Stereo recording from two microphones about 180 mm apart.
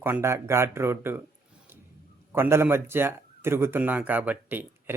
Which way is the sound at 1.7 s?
15° right (ahead or behind).